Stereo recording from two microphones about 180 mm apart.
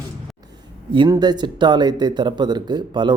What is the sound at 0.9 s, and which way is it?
Speech, 25° right (ahead or behind).